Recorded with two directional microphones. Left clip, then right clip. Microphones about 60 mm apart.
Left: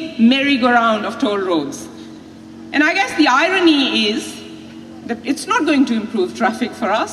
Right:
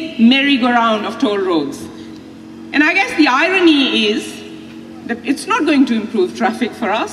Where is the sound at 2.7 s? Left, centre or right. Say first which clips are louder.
Right 2 dB; left.